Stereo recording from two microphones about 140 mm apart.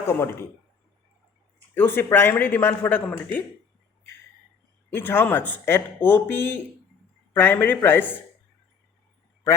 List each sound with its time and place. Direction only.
0.1 s speech: 15° left (ahead or behind)
1.7 s speech: 15° left (ahead or behind)
4.9 s speech: 15° left (ahead or behind)